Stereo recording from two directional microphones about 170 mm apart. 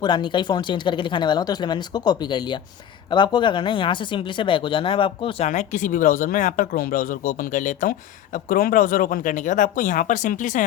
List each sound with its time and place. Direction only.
0.0 s speech: 25° left (ahead or behind)
5.5 s speech: 45° left (ahead or behind)